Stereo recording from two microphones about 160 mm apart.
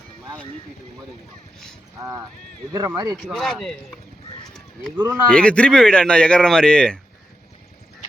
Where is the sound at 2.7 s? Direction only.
20° right (ahead or behind).